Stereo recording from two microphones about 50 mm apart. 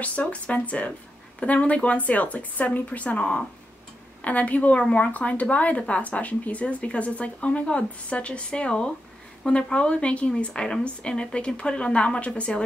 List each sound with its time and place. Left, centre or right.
0.0 s a woman's voice: left